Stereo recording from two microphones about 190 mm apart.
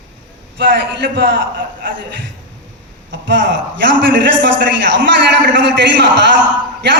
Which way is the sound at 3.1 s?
65° right (ahead or behind).